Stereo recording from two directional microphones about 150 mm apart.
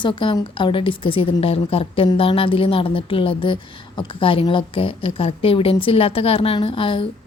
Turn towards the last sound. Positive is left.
turn(degrees=35)  # may be behind; listen again after turning